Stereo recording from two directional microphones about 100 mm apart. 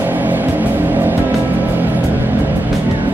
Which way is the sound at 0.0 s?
20° right (ahead or behind).